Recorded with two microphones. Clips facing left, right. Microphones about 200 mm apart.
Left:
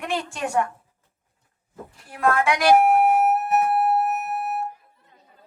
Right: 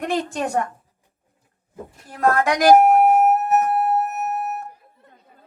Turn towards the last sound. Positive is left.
turn(degrees=-40)  # may be behind; listen again after turning